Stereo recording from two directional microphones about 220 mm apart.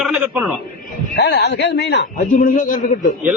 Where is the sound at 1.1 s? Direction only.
50° left (ahead or behind).